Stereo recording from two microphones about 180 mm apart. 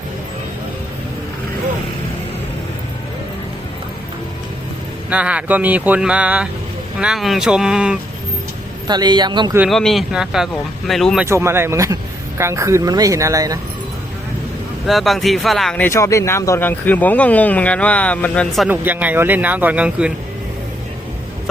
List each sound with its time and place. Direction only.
5.0 s speech: 5° right (ahead or behind)
8.9 s a man's voice: 25° right (ahead or behind)
9.6 s speech: centre (ahead or behind)
11.3 s speech: 15° right (ahead or behind)
14.8 s speech: centre (ahead or behind)
18.7 s speech: 10° right (ahead or behind)